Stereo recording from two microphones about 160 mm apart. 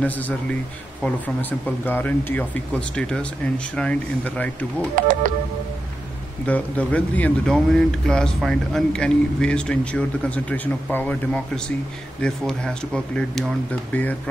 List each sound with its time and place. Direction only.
1.0 s speech: 10° left (ahead or behind)
4.9 s speech: 55° right (ahead or behind)
6.4 s speech: 10° left (ahead or behind)